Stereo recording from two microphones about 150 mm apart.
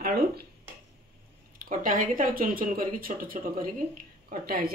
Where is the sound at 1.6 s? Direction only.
65° right (ahead or behind).